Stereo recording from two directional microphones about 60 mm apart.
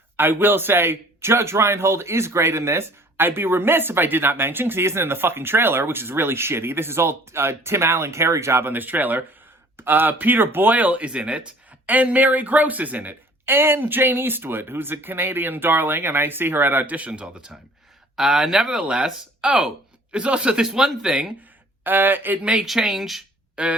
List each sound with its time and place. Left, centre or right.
0.2 s a man's voice: right; by 17.5 s centre
18.2 s speech: centre
21.8 s a man's voice: right
22.6 s speech: centre
23.6 s speech: right